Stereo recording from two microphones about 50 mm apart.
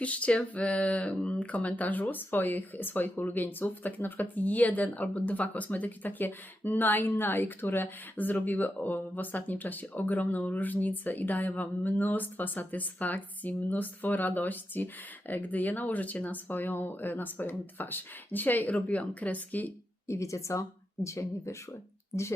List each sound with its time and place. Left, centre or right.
0.0 s a sound: left
0.5 s speech: left
20.1 s speech: left